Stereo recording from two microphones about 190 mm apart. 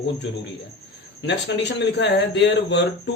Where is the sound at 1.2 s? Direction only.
65° left (ahead or behind).